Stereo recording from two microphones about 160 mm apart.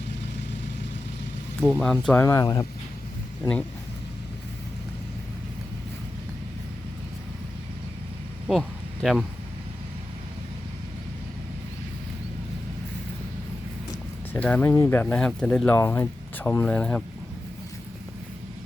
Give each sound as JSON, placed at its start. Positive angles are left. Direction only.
{"t": 1.7, "sound": "speech", "side_deg": 5}
{"t": 2.1, "sound": "speech", "side_deg": 20}
{"t": 8.4, "sound": "a sound", "side_deg": 0}
{"t": 14.3, "sound": "speech", "side_deg": 10}